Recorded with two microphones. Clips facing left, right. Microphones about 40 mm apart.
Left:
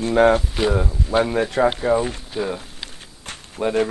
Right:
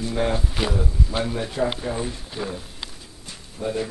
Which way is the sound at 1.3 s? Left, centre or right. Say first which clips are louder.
Left 6 dB; left.